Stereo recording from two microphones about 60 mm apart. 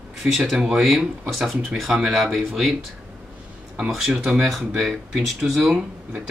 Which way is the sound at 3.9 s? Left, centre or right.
Centre.